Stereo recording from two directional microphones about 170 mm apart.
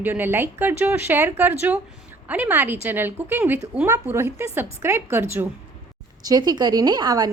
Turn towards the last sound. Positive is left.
turn(degrees=-25)  # may be behind; listen again after turning